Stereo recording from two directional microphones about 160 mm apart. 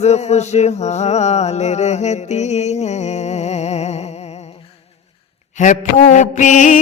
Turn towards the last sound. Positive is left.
turn(degrees=50)  # may be behind; listen again after turning